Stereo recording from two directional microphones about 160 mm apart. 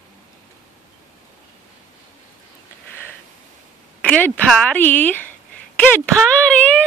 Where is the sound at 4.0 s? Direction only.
10° left (ahead or behind).